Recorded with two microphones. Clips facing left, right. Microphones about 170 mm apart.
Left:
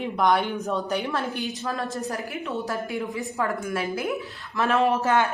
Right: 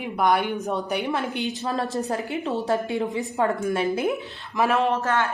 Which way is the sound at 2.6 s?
25° right (ahead or behind).